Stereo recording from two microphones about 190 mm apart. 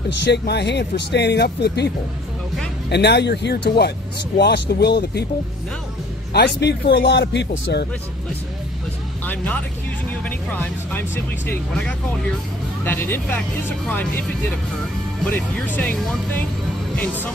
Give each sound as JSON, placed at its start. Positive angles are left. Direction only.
{"t": 0.2, "sound": "speech", "side_deg": 60}
{"t": 2.9, "sound": "speech", "side_deg": 60}
{"t": 6.3, "sound": "speech", "side_deg": 60}
{"t": 9.2, "sound": "speech", "side_deg": 10}